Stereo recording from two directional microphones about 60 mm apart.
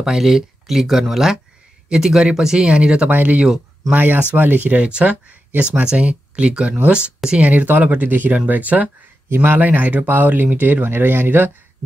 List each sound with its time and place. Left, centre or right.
0.0 s speech: centre
3.1 s speech: right
9.3 s speech: right
9.6 s speech: right